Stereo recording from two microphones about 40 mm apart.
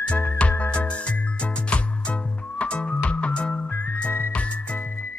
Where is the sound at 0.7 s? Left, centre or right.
Left.